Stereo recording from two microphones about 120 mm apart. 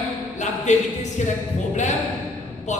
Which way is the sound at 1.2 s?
90° left.